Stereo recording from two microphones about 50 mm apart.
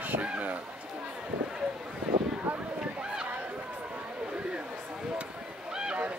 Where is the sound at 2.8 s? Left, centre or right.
Centre.